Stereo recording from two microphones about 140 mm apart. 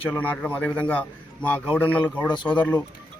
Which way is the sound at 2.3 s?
35° left (ahead or behind).